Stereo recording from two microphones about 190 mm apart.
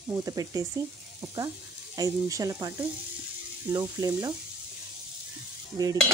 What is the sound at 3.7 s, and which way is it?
Speech, 20° right (ahead or behind).